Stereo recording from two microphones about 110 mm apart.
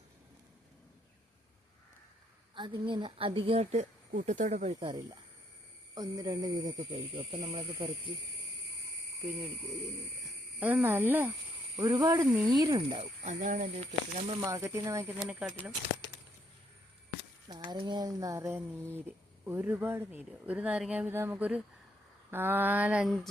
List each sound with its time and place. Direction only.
2.6 s a woman's voice: 45° right (ahead or behind); by 3.8 s 75° right (ahead or behind)
4.3 s speech: 85° right
5.9 s speech: 35° right (ahead or behind)
10.6 s speech: 15° right (ahead or behind)
11.8 s speech: 35° right (ahead or behind)
13.0 s speech: 85° right
14.4 s speech: 30° right (ahead or behind)
15.3 s speech: 10° right (ahead or behind)
17.5 s speech: 40° right (ahead or behind)
19.5 s speech: 20° right (ahead or behind)
21.1 s speech: 20° right (ahead or behind)
23.0 s a sound: centre (ahead or behind)